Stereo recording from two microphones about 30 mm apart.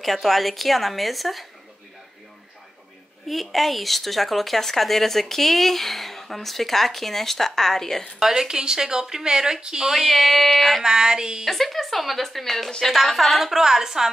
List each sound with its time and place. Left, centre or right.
0.0 s speech: centre
3.3 s speech: centre
8.2 s speech: centre
9.8 s speech: centre
10.8 s speech: right
11.4 s speech: centre
13.4 s a woman's voice: centre